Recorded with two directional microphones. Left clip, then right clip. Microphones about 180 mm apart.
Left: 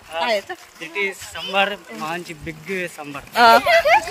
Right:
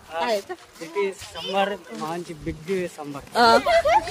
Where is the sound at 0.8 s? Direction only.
20° right (ahead or behind).